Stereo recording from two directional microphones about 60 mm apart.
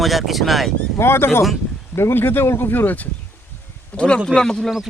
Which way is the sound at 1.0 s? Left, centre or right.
Left.